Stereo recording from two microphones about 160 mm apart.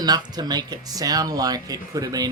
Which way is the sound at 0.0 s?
25° right (ahead or behind).